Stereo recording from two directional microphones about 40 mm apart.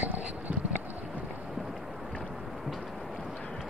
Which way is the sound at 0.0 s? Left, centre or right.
Right.